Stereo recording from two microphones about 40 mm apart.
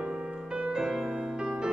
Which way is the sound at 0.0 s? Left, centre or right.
Right.